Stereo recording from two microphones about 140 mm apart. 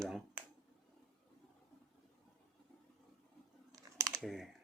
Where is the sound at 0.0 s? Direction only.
5° right (ahead or behind).